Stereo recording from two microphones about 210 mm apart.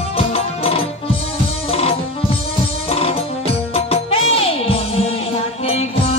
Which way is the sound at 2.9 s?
30° left (ahead or behind).